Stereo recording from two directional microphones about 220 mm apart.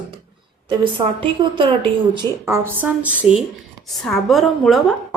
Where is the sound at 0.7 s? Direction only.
20° right (ahead or behind).